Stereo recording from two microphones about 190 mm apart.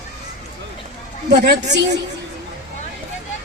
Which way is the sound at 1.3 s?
65° right (ahead or behind).